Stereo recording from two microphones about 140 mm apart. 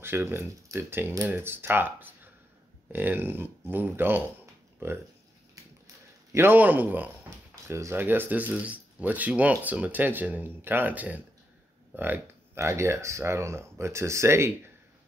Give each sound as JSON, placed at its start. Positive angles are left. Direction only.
{"t": 0.0, "sound": "speech", "side_deg": -15}
{"t": 5.6, "sound": "a sound", "side_deg": -25}
{"t": 6.3, "sound": "speech", "side_deg": -15}